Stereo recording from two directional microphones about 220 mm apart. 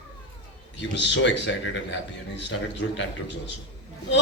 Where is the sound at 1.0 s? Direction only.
55° left (ahead or behind).